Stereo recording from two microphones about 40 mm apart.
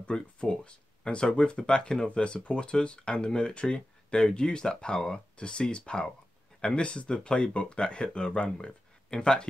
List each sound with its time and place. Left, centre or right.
0.0 s speech: left
2.0 s speech: left